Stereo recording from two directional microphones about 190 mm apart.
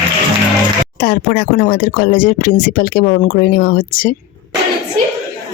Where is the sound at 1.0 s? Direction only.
55° left (ahead or behind).